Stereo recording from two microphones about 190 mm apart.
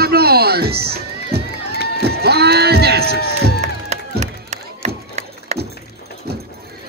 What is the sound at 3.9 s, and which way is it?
Wood, 35° right (ahead or behind).